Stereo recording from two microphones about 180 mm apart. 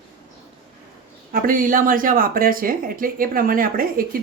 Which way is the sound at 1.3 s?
50° right (ahead or behind).